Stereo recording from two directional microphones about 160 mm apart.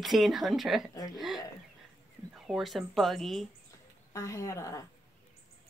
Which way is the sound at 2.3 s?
Centre (ahead or behind).